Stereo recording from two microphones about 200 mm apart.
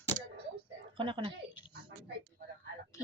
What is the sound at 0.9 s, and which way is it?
Speech, 25° right (ahead or behind).